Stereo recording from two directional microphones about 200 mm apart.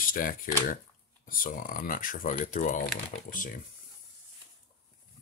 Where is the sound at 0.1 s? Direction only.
45° left (ahead or behind).